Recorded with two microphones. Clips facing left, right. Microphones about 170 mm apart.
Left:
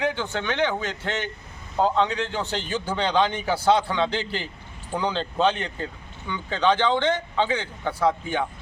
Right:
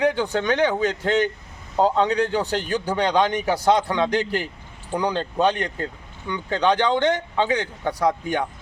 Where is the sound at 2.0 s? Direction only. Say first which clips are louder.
Right 3 dB; 40° right (ahead or behind).